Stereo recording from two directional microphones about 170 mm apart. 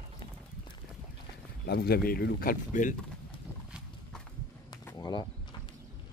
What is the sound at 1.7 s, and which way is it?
Speech, 65° left (ahead or behind).